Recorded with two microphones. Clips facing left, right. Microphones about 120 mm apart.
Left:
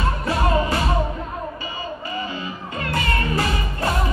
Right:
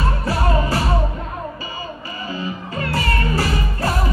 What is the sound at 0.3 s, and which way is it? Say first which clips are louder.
Music: even; 35° right (ahead or behind).